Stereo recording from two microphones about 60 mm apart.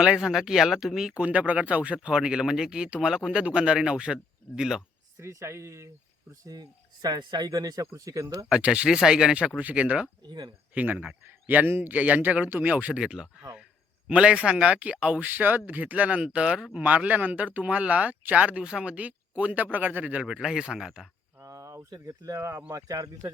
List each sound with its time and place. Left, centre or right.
0.0 s speech: centre
1.1 s speech: right
5.2 s speech: right
6.4 s speech: right
8.4 s speech: centre
20.2 s speech: centre
21.4 s a sound: right
22.4 s speech: right
22.7 s speech: right